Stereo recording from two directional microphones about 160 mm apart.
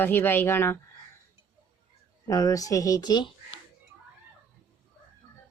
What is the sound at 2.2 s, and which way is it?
Speech, 20° left (ahead or behind).